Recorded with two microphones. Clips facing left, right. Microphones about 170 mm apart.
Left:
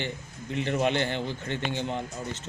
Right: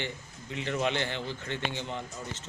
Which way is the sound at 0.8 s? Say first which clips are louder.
Left 4 dB; 50° left (ahead or behind).